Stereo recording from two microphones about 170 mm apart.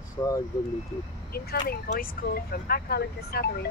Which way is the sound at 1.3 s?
60° left (ahead or behind).